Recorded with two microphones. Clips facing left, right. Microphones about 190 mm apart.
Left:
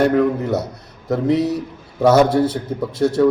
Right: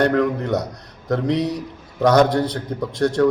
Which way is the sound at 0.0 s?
5° left (ahead or behind).